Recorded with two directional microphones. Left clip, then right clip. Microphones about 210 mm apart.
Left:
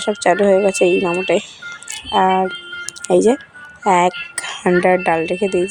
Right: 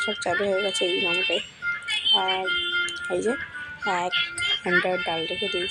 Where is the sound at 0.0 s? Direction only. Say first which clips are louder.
Left 10 dB; 35° left (ahead or behind).